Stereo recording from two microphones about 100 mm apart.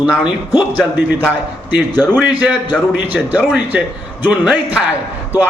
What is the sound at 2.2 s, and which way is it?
A man's voice, 10° right (ahead or behind).